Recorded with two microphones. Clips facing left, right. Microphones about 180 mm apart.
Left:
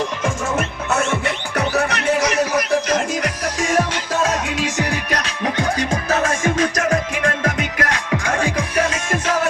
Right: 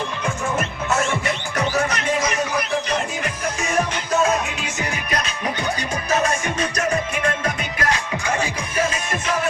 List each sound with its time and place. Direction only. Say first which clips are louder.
1.2 s music: left 2 dB; 65° left (ahead or behind)
8.5 s music: left 3 dB; 90° left